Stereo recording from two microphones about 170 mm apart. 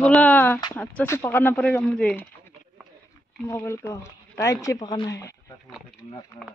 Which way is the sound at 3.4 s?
15° left (ahead or behind).